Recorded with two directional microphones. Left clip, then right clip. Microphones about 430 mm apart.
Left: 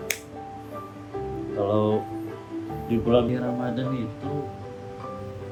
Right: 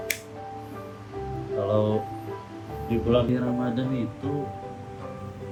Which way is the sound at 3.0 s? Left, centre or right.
Centre.